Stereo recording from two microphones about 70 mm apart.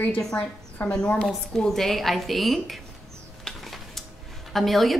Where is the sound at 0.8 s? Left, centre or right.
Left.